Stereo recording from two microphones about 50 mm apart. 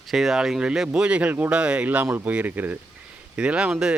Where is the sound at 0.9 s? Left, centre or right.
Right.